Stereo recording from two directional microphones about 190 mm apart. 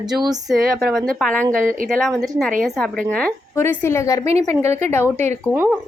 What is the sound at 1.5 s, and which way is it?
Speech, 45° right (ahead or behind).